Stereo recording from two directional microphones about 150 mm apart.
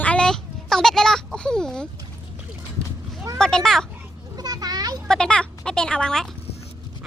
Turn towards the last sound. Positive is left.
turn(degrees=5)  # may be behind; listen again after turning